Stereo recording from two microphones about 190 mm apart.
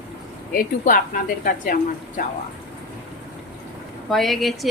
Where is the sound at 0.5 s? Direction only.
50° left (ahead or behind).